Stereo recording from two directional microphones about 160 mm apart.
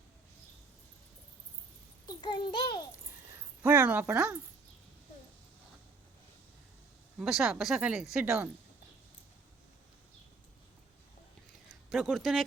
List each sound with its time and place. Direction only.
2.0 s a child's voice: 25° left (ahead or behind)
3.6 s speech: 10° right (ahead or behind)
7.2 s speech: centre (ahead or behind)
11.9 s speech: centre (ahead or behind)